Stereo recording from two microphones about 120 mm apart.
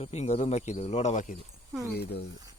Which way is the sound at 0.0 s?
65° left (ahead or behind).